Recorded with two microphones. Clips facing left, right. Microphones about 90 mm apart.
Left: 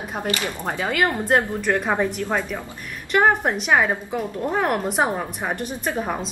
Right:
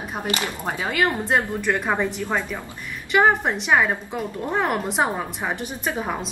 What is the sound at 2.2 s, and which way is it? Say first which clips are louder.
Speech: left 1 dB; 15° left (ahead or behind).